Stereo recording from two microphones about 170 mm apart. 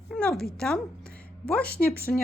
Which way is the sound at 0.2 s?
10° left (ahead or behind).